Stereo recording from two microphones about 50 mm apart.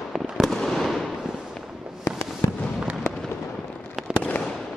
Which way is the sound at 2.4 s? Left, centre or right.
Left.